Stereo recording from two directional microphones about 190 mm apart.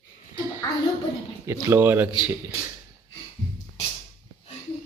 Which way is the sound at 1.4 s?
15° right (ahead or behind).